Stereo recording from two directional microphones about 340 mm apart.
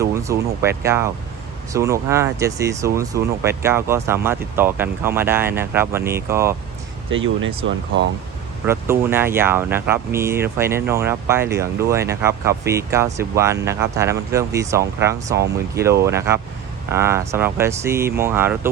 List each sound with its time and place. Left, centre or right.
0.0 s speech: centre
7.1 s speech: right
8.6 s speech: centre